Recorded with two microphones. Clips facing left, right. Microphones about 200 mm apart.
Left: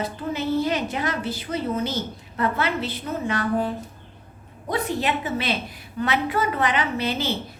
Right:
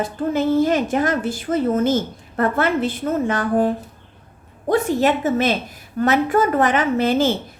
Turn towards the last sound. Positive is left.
turn(degrees=-50)  # may be behind; listen again after turning